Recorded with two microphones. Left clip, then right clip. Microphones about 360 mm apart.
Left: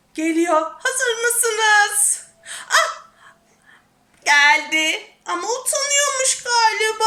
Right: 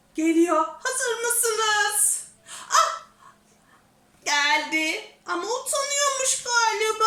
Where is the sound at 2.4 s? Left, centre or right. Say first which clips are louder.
Left 3 dB; centre.